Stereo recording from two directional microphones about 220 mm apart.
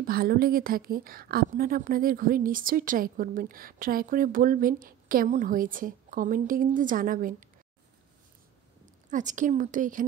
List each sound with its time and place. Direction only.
0.0 s a woman's voice: 45° right (ahead or behind)
9.1 s a woman's voice: 35° right (ahead or behind)